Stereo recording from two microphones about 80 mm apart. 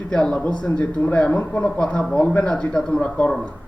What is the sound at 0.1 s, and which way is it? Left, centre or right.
A man's voice, centre.